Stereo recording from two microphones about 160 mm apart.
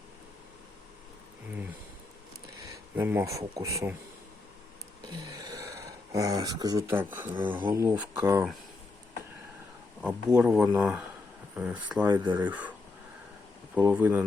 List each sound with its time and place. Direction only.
2.6 s speech: 15° right (ahead or behind)
5.0 s a sound: 25° right (ahead or behind)
7.5 s speech: 15° right (ahead or behind)
10.0 s speech: 5° right (ahead or behind)
13.7 s speech: 10° right (ahead or behind)